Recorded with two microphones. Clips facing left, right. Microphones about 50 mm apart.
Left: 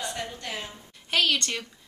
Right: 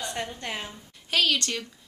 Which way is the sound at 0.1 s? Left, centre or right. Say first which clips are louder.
Right 1 dB; right.